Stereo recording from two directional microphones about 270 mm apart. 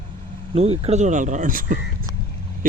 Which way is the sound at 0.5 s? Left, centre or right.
Right.